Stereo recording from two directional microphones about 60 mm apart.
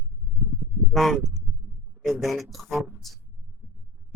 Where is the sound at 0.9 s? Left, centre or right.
Centre.